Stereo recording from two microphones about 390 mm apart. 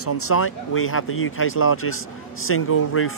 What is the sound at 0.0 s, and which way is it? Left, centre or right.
Speech, left.